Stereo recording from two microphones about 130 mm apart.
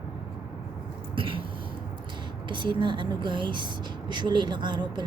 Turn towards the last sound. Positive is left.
turn(degrees=-35)  # may be behind; listen again after turning